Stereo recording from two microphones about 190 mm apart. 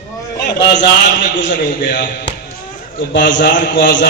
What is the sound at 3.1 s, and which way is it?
Speech, 75° left (ahead or behind).